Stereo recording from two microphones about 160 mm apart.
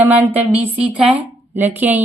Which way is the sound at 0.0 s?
10° right (ahead or behind).